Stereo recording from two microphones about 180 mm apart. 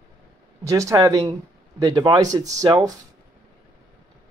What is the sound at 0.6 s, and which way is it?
Speech, 15° right (ahead or behind).